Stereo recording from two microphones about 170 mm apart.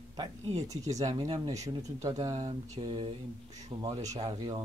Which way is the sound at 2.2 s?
40° right (ahead or behind).